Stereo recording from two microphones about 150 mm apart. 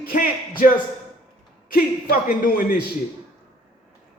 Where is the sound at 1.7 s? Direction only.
75° left (ahead or behind).